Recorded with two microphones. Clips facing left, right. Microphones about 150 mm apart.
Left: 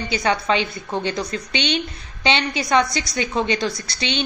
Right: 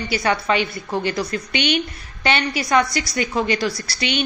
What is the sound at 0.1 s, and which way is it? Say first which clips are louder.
A woman's voice: even; 20° left (ahead or behind).